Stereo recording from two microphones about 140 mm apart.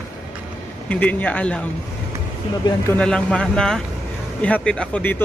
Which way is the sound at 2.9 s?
10° left (ahead or behind).